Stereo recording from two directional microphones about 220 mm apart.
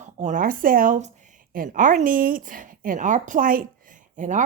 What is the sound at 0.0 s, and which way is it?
Speech, 35° right (ahead or behind).